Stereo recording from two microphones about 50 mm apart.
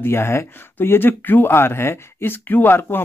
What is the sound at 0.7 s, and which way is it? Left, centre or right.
Speech, left.